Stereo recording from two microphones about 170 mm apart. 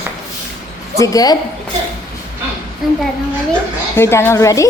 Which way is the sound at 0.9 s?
20° left (ahead or behind).